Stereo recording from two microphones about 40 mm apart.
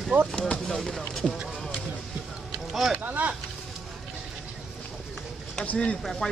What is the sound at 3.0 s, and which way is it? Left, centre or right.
Vehicle, right.